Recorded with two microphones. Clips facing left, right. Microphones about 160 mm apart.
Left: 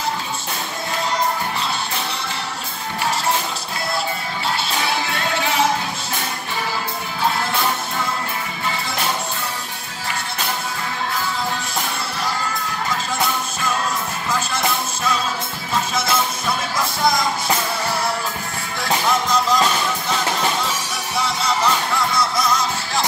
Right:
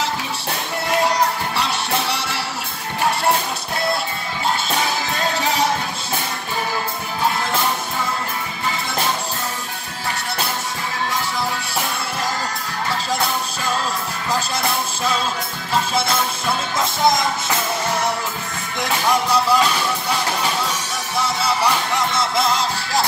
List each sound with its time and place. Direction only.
1.6 s music: 70° right (ahead or behind)
16.7 s music: 20° right (ahead or behind)
18.8 s music: 10° right (ahead or behind)
21.9 s music: 25° right (ahead or behind)